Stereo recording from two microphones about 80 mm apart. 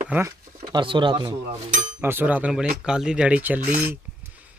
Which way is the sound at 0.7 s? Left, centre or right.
Right.